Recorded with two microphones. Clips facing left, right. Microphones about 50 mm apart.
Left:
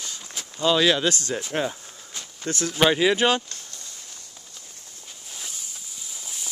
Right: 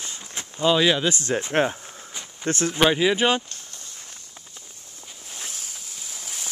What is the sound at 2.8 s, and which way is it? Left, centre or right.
Speech, centre.